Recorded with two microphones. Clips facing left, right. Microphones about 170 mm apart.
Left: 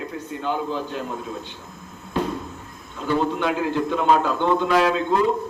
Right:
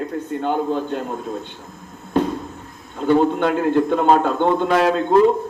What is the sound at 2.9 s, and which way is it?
A man's voice, 50° right (ahead or behind).